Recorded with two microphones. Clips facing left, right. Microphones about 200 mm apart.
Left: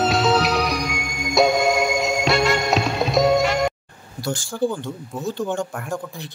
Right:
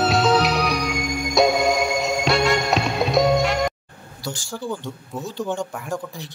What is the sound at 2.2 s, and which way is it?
Music, centre (ahead or behind).